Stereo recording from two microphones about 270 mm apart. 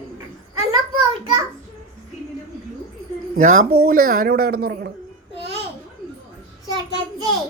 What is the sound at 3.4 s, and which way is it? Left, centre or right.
A woman's voice, right.